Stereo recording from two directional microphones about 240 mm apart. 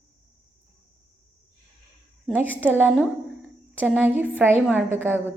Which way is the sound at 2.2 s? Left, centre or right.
Centre.